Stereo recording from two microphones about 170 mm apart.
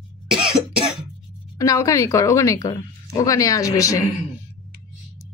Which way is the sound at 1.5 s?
20° left (ahead or behind).